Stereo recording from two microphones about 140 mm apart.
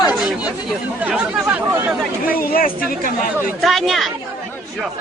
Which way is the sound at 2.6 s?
90° left.